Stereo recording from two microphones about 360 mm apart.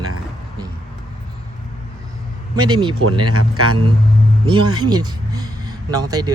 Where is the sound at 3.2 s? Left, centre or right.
Right.